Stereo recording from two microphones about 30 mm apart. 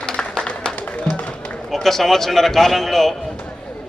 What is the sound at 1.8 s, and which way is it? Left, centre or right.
A man's voice, centre.